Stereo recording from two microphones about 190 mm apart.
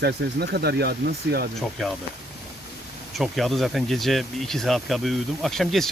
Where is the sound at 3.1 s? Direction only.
Centre (ahead or behind).